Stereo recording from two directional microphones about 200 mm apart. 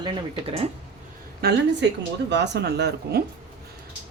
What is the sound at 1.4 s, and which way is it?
A woman's voice, 55° right (ahead or behind).